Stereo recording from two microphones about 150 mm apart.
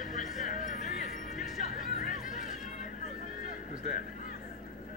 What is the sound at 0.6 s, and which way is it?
Music, 60° left (ahead or behind).